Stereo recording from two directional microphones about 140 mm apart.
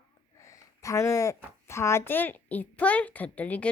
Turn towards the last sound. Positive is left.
turn(degrees=10)  # may be behind; listen again after turning